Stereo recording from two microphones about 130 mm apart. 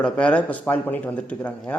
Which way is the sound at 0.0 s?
10° left (ahead or behind).